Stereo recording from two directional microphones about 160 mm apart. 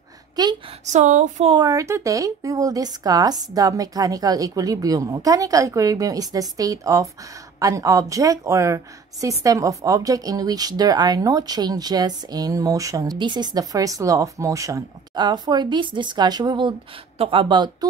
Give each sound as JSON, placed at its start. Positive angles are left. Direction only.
{"t": 0.4, "sound": "a woman's voice", "side_deg": -25}
{"t": 0.8, "sound": "speech", "side_deg": -50}
{"t": 1.5, "sound": "a woman's voice", "side_deg": -25}